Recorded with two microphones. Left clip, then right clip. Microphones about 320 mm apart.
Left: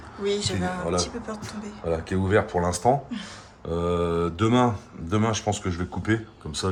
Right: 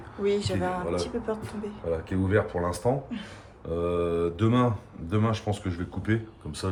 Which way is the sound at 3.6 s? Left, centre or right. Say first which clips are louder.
Left 2 dB; left.